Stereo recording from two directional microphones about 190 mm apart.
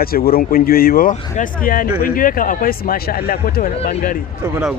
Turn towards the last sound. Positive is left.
turn(degrees=-10)  # may be behind; listen again after turning